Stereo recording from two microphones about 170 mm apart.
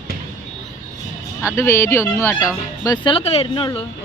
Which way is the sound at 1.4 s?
15° left (ahead or behind).